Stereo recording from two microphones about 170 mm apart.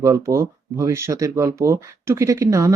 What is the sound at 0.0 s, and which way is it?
Speech, 20° right (ahead or behind).